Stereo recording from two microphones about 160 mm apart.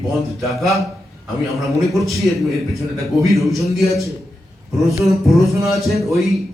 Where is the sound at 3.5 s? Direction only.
Centre (ahead or behind).